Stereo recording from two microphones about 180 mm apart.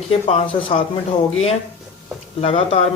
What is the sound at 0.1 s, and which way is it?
Speech, 35° left (ahead or behind).